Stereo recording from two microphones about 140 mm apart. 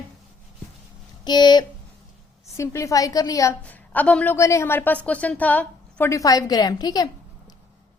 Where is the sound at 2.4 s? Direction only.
20° left (ahead or behind).